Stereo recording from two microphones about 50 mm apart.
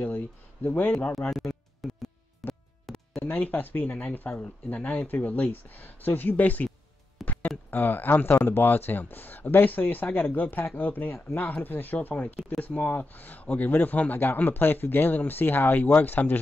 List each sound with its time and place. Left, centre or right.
0.0 s speech: left
1.3 s music: centre
3.2 s speech: left